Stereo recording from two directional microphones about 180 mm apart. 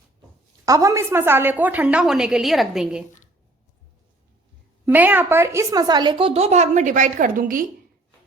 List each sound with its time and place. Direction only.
0.6 s a woman's voice: 20° right (ahead or behind); by 3.0 s centre (ahead or behind)
4.9 s a woman's voice: 10° right (ahead or behind); by 7.6 s 50° right (ahead or behind)